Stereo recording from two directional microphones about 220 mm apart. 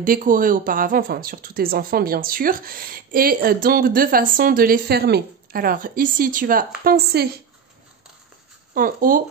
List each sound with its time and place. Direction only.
0.0 s a woman's voice: 40° right (ahead or behind)
8.7 s a woman's voice: 40° right (ahead or behind)